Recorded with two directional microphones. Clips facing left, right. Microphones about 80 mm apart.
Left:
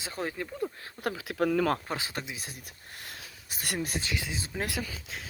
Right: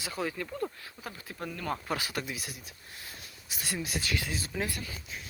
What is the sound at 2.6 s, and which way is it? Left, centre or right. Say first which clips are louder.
Speech: left 2 dB; left.